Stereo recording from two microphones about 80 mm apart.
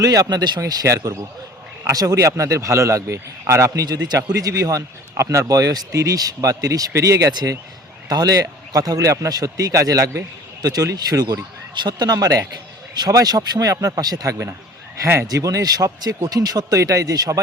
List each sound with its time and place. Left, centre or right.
0.0 s speech: right
0.6 s speech: right
3.8 s speech: right
10.6 s speech: right
11.7 s speech: right